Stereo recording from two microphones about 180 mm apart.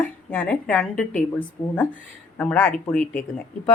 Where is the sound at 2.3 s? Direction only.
10° left (ahead or behind).